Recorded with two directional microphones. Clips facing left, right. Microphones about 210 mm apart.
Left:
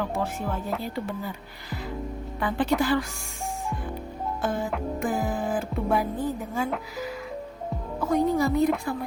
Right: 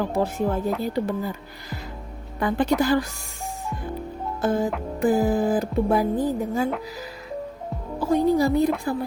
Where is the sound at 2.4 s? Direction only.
40° right (ahead or behind).